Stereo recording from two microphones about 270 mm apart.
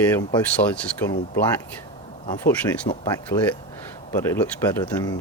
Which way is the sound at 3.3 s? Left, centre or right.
Left.